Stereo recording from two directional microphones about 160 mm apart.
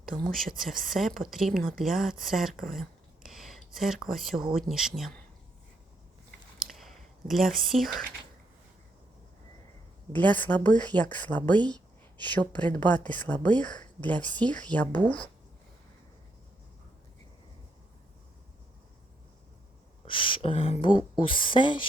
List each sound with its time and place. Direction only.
0.2 s speech: centre (ahead or behind)
3.2 s a sound: centre (ahead or behind)
4.5 s speech: 5° right (ahead or behind)
6.7 s whispering: centre (ahead or behind)
10.1 s speech: 10° left (ahead or behind)
20.1 s speech: 30° left (ahead or behind)